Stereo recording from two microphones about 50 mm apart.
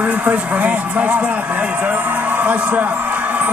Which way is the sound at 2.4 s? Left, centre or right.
Right.